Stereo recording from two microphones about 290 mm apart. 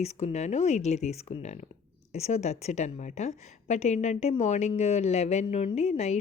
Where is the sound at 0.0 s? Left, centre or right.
Left.